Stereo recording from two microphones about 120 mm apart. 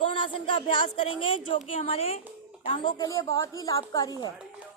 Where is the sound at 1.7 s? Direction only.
55° left (ahead or behind).